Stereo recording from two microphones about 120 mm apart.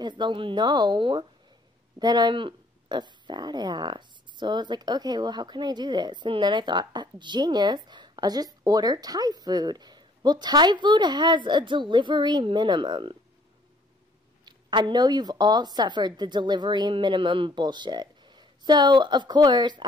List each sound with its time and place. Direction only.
0.0 s speech: 40° right (ahead or behind)
14.4 s speech: 40° right (ahead or behind)